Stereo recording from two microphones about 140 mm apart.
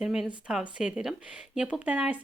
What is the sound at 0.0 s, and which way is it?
Speech, 5° right (ahead or behind).